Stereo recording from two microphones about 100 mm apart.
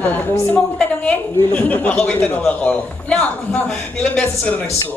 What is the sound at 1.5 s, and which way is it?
A man's voice, 15° left (ahead or behind).